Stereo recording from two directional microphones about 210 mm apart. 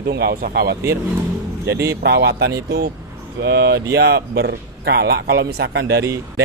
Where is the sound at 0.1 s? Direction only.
50° right (ahead or behind).